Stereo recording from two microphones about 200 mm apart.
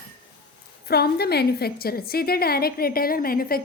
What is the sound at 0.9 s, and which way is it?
A woman's voice, 50° left (ahead or behind).